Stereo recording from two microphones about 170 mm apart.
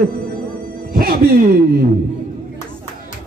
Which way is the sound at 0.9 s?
60° right (ahead or behind).